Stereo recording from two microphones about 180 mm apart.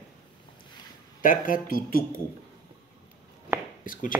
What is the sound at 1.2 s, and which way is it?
Speech, 50° left (ahead or behind).